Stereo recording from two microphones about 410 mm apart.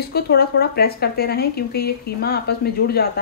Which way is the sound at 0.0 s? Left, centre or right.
Left.